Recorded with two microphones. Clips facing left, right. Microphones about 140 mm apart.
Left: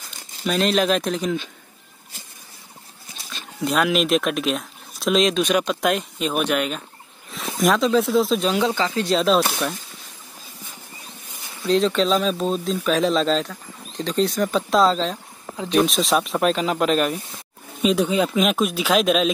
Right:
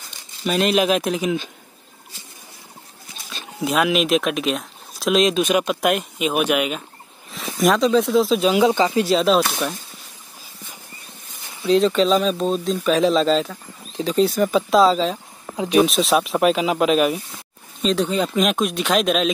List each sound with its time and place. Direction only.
0.4 s speech: 5° right (ahead or behind)
3.6 s speech: centre (ahead or behind)
9.0 s speech: centre (ahead or behind)
11.6 s speech: centre (ahead or behind)
15.5 s speech: 15° right (ahead or behind)
15.8 s speech: centre (ahead or behind)
17.8 s speech: 10° left (ahead or behind)